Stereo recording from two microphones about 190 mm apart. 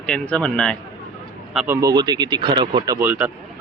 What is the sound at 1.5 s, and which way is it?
Speech, 10° right (ahead or behind).